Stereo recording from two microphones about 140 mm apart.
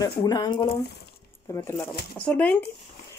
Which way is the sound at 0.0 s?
25° left (ahead or behind).